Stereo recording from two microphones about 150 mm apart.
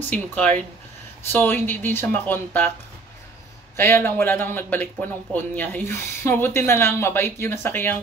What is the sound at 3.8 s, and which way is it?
Speech, 15° left (ahead or behind).